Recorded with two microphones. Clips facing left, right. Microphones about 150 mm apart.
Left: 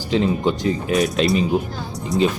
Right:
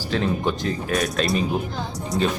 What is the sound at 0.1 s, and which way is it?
Speech, 15° left (ahead or behind).